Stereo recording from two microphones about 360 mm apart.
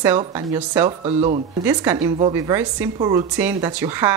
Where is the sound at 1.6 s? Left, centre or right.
Centre.